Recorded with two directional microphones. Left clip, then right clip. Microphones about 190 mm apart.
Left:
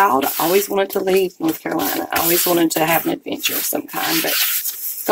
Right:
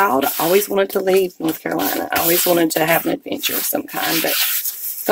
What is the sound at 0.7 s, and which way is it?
Speech, 45° right (ahead or behind).